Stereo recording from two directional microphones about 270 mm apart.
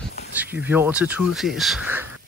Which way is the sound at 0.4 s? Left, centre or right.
Centre.